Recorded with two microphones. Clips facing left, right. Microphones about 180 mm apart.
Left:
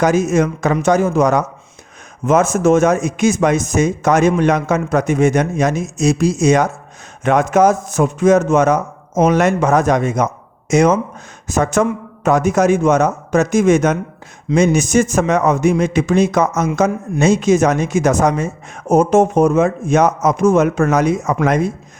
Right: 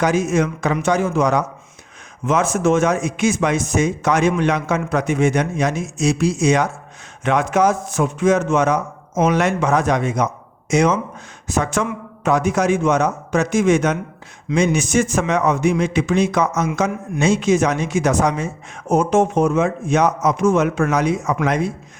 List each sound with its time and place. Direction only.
0.0 s speech: 45° left (ahead or behind)